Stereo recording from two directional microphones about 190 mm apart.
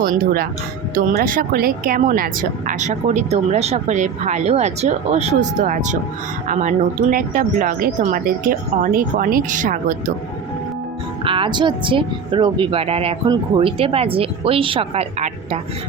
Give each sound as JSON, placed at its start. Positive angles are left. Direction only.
{"t": 0.0, "sound": "speech", "side_deg": -50}
{"t": 11.2, "sound": "speech", "side_deg": -30}